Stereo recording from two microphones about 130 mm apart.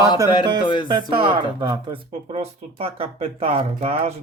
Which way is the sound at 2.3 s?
50° right (ahead or behind).